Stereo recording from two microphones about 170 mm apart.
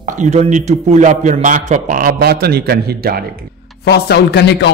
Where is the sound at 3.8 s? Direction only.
70° left (ahead or behind); by 4.7 s 85° left.